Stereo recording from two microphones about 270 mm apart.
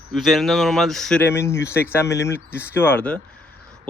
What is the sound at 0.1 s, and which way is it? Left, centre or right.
Speech, centre.